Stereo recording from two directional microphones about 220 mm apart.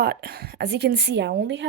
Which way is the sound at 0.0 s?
45° right (ahead or behind).